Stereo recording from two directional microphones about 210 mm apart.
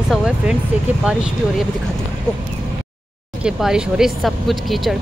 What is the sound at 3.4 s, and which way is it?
Speech, 5° right (ahead or behind).